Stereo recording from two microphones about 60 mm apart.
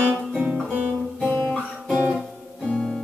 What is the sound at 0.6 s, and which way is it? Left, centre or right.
Guitar, right.